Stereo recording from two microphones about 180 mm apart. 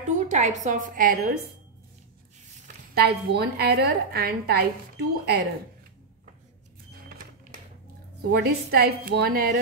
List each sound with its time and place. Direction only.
0.3 s a woman's voice: 40° right (ahead or behind)
2.9 s a woman's voice: 65° right (ahead or behind)
8.2 s a woman's voice: 65° right (ahead or behind)